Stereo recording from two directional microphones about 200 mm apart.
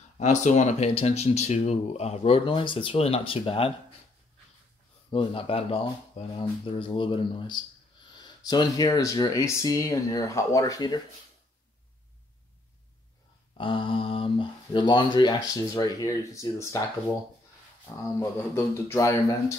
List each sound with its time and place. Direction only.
0.2 s speech: 35° left (ahead or behind)
5.1 s speech: 25° left (ahead or behind)
13.6 s speech: 25° left (ahead or behind)
17.9 s speech: 15° left (ahead or behind)